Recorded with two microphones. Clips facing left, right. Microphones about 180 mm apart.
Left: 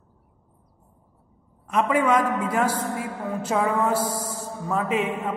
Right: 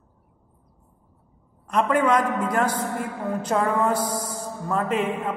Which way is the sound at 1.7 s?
5° left (ahead or behind).